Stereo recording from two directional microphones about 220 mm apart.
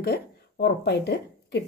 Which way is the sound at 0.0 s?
45° left (ahead or behind).